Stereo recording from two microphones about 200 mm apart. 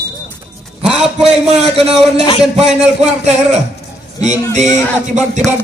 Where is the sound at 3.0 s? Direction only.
35° right (ahead or behind).